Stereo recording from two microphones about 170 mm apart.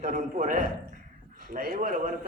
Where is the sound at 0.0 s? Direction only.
55° right (ahead or behind).